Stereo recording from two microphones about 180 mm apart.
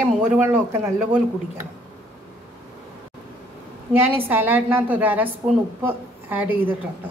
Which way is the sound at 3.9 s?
10° right (ahead or behind).